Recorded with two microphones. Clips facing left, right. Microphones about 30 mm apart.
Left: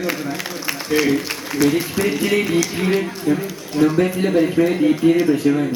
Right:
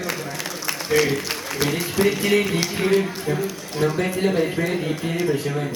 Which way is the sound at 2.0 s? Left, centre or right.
Centre.